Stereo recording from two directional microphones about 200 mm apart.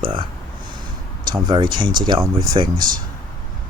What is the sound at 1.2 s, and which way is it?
Speech, 20° right (ahead or behind).